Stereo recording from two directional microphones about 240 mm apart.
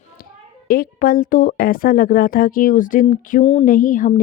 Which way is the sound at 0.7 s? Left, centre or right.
Left.